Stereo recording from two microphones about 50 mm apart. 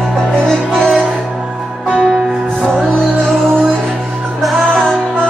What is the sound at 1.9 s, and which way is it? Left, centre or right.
Music, centre.